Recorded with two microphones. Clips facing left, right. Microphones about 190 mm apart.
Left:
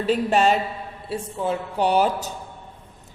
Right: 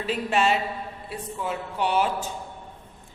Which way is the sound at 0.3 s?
40° left (ahead or behind).